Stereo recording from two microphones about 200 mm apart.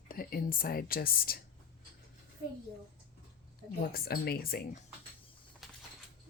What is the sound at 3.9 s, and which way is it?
Speech, 50° left (ahead or behind).